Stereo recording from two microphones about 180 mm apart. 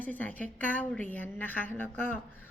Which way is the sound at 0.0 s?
10° left (ahead or behind).